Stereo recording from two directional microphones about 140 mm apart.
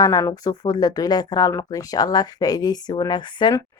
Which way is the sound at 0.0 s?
25° left (ahead or behind).